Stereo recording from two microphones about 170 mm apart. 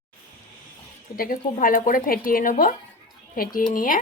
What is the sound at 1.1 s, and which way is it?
Speech, 55° left (ahead or behind).